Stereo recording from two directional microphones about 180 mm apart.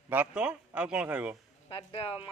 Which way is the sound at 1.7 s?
30° left (ahead or behind).